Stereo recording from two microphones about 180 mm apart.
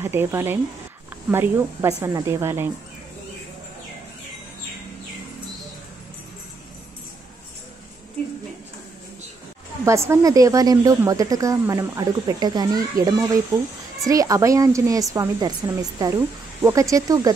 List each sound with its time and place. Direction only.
0.0 s speech: 15° right (ahead or behind)
9.8 s speech: 15° right (ahead or behind)